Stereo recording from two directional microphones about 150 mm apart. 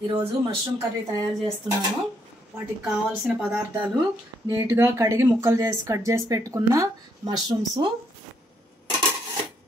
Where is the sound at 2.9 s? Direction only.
5° right (ahead or behind).